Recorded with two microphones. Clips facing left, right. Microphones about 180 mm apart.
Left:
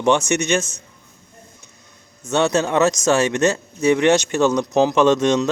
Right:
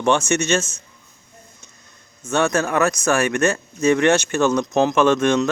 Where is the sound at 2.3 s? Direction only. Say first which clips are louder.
Left 1 dB; 20° left (ahead or behind).